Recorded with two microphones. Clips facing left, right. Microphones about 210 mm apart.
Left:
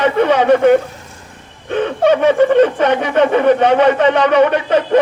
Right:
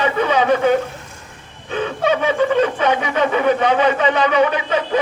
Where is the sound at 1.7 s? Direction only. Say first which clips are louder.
Left 6 dB; 55° left (ahead or behind).